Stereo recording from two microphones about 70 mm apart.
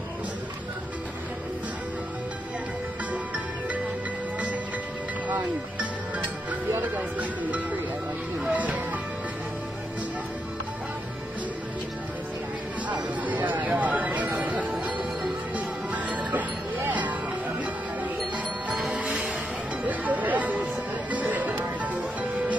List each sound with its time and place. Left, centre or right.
5.3 s music: right
12.8 s chatter: right
14.8 s music: right
18.9 s music: centre